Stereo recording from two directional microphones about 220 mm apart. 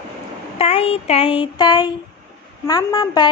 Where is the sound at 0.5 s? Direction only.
30° left (ahead or behind).